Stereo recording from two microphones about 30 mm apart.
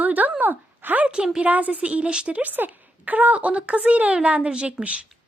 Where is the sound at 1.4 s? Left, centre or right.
Right.